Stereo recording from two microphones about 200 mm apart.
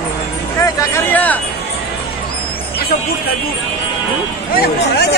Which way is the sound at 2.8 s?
50° left (ahead or behind).